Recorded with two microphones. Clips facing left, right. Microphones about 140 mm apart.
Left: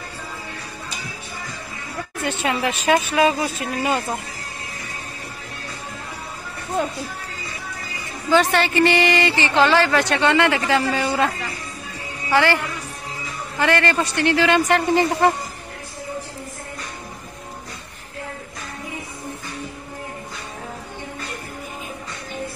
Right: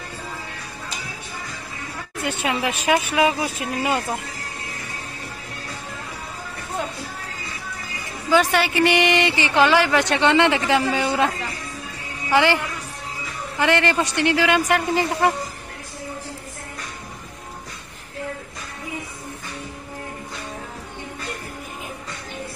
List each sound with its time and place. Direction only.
2.2 s a woman's voice: 10° right (ahead or behind)
8.3 s a woman's voice: 10° right (ahead or behind)
12.3 s a woman's voice: 15° right (ahead or behind)
13.6 s a woman's voice: 15° right (ahead or behind)